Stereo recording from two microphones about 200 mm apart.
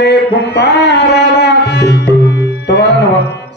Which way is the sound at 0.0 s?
60° left (ahead or behind).